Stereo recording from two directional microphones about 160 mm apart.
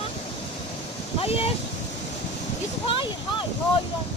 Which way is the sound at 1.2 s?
40° left (ahead or behind).